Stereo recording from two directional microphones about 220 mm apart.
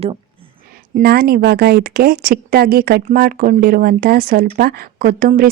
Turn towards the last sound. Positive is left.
turn(degrees=-40)  # may be behind; listen again after turning